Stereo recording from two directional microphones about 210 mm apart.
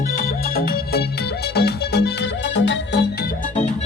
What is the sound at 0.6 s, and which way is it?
Music, 45° left (ahead or behind).